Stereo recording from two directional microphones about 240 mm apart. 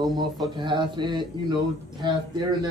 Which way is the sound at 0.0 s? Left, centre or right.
Centre.